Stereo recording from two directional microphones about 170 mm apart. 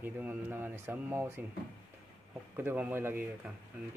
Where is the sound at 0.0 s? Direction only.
10° right (ahead or behind).